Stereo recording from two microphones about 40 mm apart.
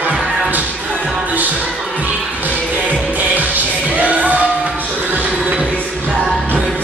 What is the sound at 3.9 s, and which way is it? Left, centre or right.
Music, right.